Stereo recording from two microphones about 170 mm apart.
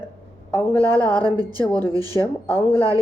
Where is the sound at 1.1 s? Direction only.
25° right (ahead or behind).